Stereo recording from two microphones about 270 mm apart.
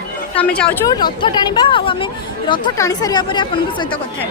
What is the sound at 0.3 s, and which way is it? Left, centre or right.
Speech, centre.